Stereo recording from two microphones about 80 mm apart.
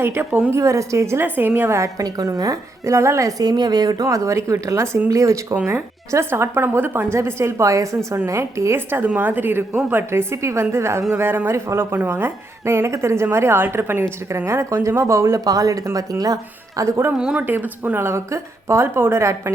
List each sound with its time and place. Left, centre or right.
0.0 s a woman's voice: right
0.3 s a woman's voice: centre
0.5 s a woman's voice: right
1.8 s a woman's voice: right
15.4 s a woman's voice: right
17.2 s a woman's voice: centre
17.4 s a woman's voice: right